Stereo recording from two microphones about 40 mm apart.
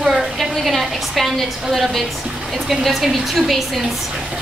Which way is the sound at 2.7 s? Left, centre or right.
Centre.